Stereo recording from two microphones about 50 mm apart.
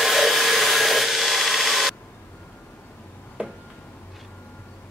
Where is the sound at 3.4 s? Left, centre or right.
Right.